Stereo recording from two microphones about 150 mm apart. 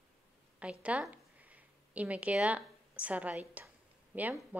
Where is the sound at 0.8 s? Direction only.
10° right (ahead or behind).